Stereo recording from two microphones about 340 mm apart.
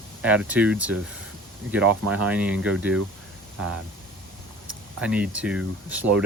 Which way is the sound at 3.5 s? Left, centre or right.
Right.